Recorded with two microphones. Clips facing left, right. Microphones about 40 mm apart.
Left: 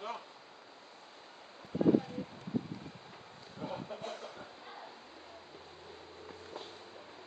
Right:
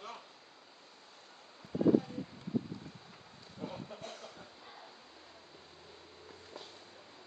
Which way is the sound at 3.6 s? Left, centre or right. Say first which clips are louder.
Left 3 dB; centre.